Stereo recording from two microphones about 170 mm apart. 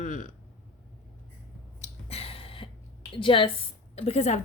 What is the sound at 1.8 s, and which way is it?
Gasp, 35° left (ahead or behind).